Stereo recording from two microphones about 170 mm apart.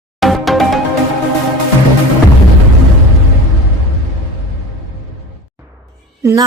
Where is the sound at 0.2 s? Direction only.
Centre (ahead or behind).